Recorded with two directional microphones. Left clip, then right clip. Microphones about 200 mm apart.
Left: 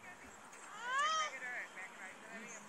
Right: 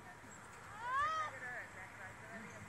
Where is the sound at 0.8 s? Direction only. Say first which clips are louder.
Left 2 dB; 45° right (ahead or behind).